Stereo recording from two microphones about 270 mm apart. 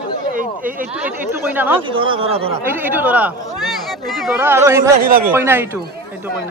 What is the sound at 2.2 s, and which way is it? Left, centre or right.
Speech, right.